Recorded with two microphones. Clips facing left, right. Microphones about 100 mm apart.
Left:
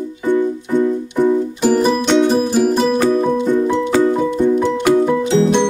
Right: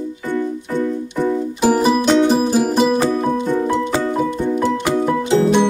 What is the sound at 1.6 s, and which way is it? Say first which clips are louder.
Music: right 1 dB; 10° right (ahead or behind).